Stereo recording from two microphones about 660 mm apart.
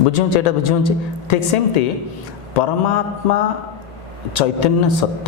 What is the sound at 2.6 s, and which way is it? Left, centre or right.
Speech, left.